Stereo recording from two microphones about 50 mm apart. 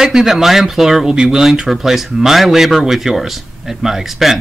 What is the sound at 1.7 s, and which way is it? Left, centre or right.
Speech, centre.